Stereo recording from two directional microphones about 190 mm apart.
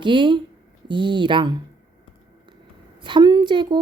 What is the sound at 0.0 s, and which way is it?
A woman's voice, 25° right (ahead or behind).